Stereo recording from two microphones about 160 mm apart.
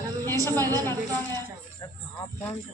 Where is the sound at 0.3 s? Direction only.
20° right (ahead or behind).